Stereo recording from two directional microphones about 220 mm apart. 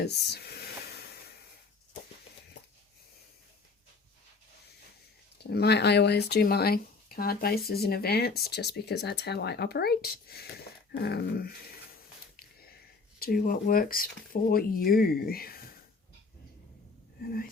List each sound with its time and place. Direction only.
0.0 s a sound: 50° left (ahead or behind)
5.4 s speech: 45° left (ahead or behind)
13.1 s speech: 45° left (ahead or behind)
17.2 s speech: 45° left (ahead or behind)